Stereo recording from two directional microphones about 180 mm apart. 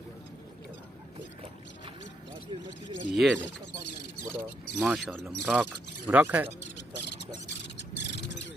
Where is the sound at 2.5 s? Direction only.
30° right (ahead or behind).